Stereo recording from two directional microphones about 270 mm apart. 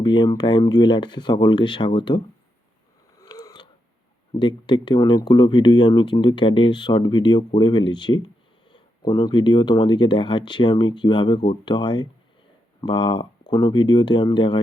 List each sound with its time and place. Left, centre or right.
0.0 s speech: centre
3.2 s mechanisms: centre
4.4 s speech: centre